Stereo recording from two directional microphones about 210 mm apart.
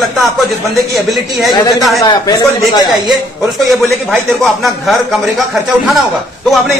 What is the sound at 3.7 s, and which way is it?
A man's voice, centre (ahead or behind).